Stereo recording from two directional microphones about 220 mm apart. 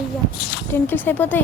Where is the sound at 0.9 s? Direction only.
10° left (ahead or behind).